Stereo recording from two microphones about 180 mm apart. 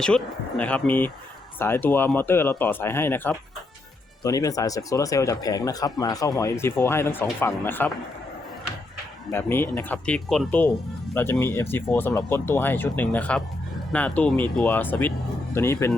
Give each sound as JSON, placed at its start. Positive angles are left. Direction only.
{"t": 0.0, "sound": "speech", "side_deg": 5}
{"t": 9.3, "sound": "speech", "side_deg": 10}